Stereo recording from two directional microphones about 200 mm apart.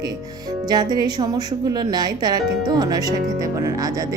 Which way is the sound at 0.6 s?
20° right (ahead or behind).